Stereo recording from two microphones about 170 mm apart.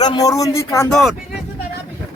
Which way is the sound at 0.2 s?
20° left (ahead or behind).